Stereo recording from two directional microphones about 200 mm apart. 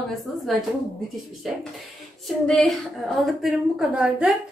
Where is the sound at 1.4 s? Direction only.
Centre (ahead or behind).